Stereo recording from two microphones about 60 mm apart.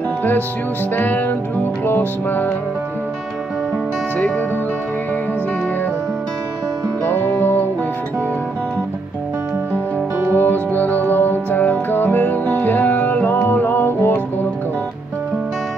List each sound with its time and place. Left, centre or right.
0.9 s music: left
7.1 s music: left
10.1 s music: right
10.4 s music: left